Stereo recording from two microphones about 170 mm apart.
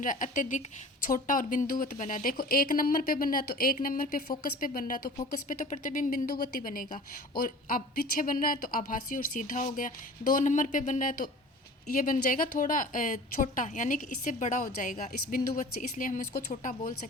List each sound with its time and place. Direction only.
0.0 s a woman's voice: 50° left (ahead or behind)